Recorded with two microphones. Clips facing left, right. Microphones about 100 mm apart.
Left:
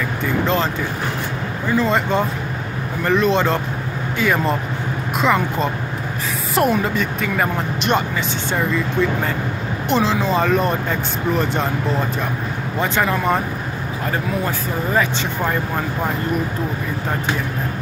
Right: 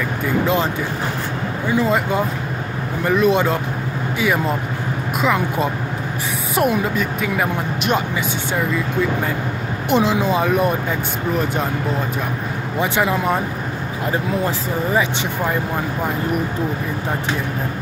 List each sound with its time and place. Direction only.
1.7 s speech: 10° right (ahead or behind)
9.8 s speech: 15° right (ahead or behind)
12.7 s speech: 15° right (ahead or behind)